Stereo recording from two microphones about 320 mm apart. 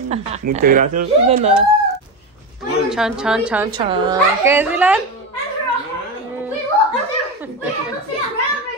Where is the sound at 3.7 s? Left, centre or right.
Centre.